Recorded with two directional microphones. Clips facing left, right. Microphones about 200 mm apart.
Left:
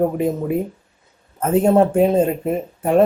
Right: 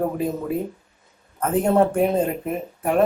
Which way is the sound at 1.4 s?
25° left (ahead or behind).